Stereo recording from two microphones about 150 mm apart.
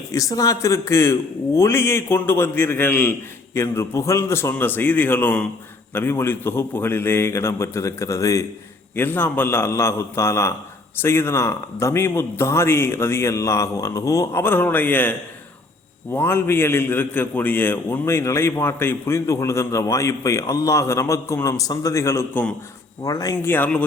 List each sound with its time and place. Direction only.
0.1 s a man's voice: 20° left (ahead or behind)
16.1 s a man's voice: 15° left (ahead or behind)